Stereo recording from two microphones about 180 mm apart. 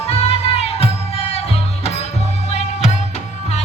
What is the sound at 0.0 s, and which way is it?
Music, 35° left (ahead or behind).